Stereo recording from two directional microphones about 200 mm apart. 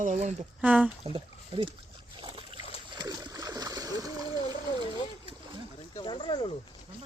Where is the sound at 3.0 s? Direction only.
20° right (ahead or behind).